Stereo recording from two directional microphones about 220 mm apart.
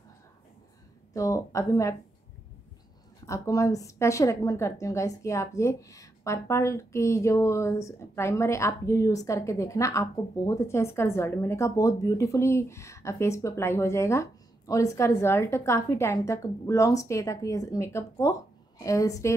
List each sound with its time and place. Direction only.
1.1 s a woman's voice: 15° left (ahead or behind)
3.3 s a woman's voice: 15° left (ahead or behind)